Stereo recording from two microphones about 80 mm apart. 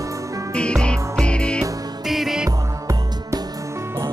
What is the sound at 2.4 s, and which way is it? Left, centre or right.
Music, right.